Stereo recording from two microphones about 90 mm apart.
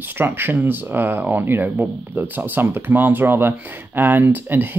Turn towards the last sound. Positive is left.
turn(degrees=-20)  # may be behind; listen again after turning